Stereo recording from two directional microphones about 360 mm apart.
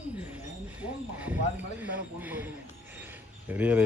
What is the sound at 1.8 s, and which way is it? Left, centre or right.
Speech, centre.